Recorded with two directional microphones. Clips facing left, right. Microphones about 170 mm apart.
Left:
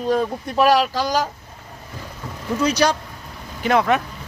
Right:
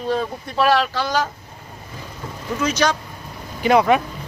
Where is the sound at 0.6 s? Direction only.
10° left (ahead or behind).